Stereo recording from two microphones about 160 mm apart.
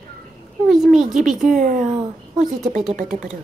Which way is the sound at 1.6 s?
55° right (ahead or behind).